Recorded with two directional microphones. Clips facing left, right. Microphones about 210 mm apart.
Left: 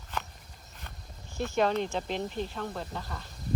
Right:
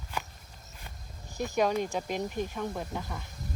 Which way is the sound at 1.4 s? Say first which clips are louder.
Even; 10° right (ahead or behind).